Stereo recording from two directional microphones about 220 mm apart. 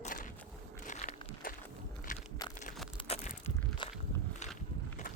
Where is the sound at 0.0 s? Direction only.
35° left (ahead or behind).